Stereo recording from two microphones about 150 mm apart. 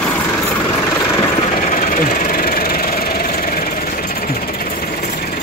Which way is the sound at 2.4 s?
75° left (ahead or behind).